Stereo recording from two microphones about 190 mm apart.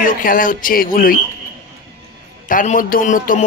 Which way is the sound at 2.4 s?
45° left (ahead or behind).